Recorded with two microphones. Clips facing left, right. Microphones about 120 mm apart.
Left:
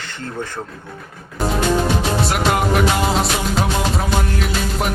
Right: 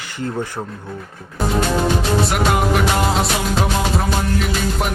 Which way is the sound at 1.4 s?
Centre (ahead or behind).